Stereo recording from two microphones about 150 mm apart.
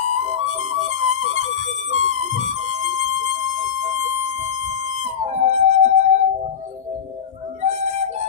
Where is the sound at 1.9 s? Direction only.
50° right (ahead or behind).